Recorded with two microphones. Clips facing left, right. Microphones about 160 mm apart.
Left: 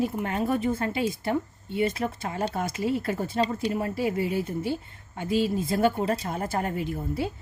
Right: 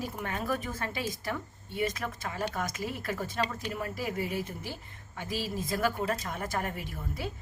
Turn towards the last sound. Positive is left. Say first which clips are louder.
# left 8 dB
turn(degrees=30)  # may be behind; listen again after turning